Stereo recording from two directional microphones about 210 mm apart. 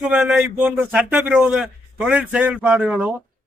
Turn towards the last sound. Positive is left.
turn(degrees=-5)  # may be behind; listen again after turning